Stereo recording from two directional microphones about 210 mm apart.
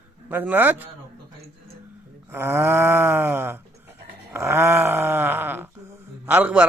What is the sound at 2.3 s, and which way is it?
Speech, 10° right (ahead or behind).